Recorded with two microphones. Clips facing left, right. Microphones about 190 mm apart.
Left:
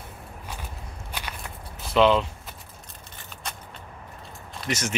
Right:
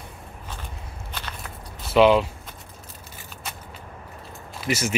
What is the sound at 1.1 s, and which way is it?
Walk, 10° left (ahead or behind).